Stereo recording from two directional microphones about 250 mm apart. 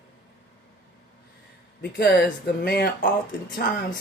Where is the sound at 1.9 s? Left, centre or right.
Left.